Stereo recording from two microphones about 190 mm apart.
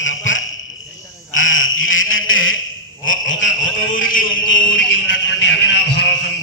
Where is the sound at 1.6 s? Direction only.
90° left.